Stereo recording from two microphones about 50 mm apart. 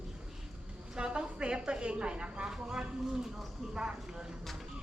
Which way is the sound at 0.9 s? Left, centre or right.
Centre.